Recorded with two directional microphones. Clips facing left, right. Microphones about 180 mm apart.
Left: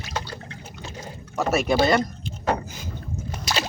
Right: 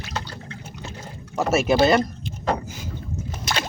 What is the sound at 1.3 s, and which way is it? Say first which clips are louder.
Speech: right 2 dB; 5° right (ahead or behind).